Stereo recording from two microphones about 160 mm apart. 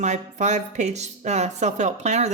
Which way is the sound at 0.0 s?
50° right (ahead or behind).